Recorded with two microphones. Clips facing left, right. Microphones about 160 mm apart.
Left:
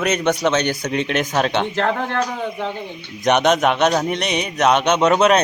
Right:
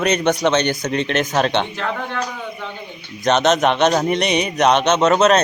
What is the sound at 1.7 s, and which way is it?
Speech, 65° left (ahead or behind).